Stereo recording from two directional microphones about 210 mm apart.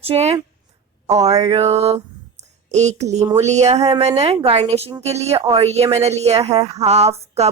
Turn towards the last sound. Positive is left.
turn(degrees=-30)  # may be behind; listen again after turning